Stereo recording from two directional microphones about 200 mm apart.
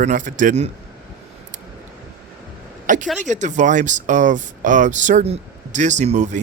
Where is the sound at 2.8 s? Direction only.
40° right (ahead or behind).